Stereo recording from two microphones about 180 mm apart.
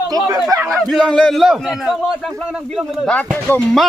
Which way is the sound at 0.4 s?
Centre (ahead or behind).